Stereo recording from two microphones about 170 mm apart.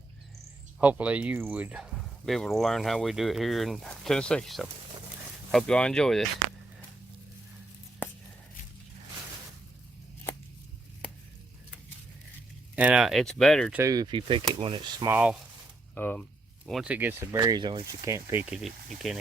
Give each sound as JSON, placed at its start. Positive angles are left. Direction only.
{"t": 0.8, "sound": "speech", "side_deg": -10}
{"t": 12.7, "sound": "speech", "side_deg": -5}
{"t": 13.7, "sound": "speech", "side_deg": -20}
{"t": 15.0, "sound": "speech", "side_deg": -10}
{"t": 16.0, "sound": "speech", "side_deg": 10}
{"t": 16.6, "sound": "speech", "side_deg": -5}
{"t": 17.4, "sound": "speech", "side_deg": -25}
{"t": 18.6, "sound": "speech", "side_deg": 0}